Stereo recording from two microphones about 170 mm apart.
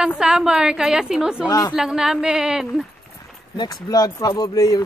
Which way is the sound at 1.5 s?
20° left (ahead or behind).